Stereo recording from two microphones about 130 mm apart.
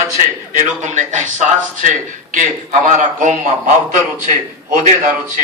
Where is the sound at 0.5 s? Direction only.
70° right (ahead or behind).